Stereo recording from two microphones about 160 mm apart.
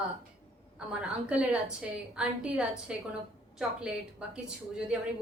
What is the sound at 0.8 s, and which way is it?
A woman's voice, 5° right (ahead or behind).